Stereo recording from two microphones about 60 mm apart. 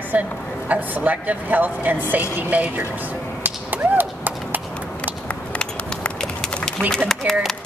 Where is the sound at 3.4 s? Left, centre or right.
Right.